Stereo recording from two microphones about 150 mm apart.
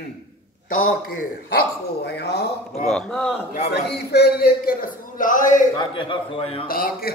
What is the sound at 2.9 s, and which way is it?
Speech, 5° left (ahead or behind).